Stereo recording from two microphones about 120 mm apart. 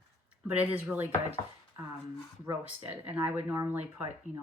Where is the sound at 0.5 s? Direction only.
15° right (ahead or behind).